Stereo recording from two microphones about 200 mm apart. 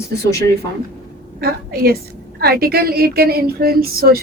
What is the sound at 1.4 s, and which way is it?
Speech, 50° right (ahead or behind).